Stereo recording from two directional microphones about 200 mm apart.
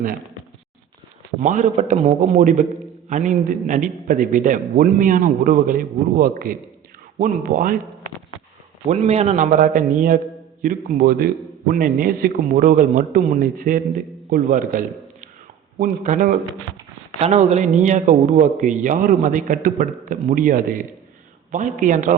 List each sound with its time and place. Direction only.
1.4 s a man's voice: 40° right (ahead or behind)